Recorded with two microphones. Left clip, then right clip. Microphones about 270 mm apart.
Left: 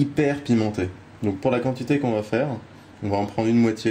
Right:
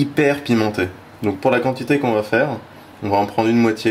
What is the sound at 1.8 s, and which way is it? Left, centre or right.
Speech, right.